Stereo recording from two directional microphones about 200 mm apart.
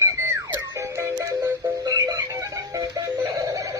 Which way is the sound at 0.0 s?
15° right (ahead or behind).